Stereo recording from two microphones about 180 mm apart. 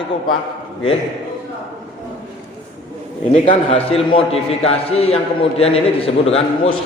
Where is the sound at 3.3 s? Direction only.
35° left (ahead or behind).